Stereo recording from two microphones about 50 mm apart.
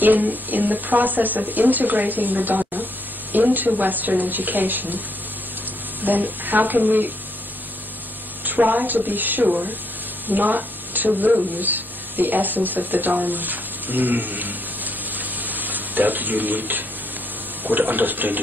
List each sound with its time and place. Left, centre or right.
0.0 s speech: right
6.0 s speech: right
8.5 s speech: right
9.5 s speech: right
13.1 s a sound: right
17.6 s speech: right